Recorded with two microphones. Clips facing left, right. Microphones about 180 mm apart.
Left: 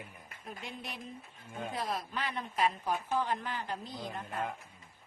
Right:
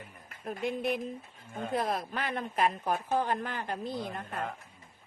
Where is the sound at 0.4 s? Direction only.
55° right (ahead or behind).